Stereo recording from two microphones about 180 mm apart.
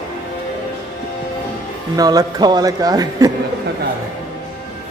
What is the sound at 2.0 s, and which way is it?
Speech, 20° right (ahead or behind).